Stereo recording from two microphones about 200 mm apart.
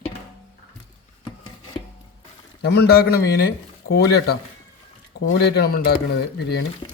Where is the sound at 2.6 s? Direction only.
55° left (ahead or behind).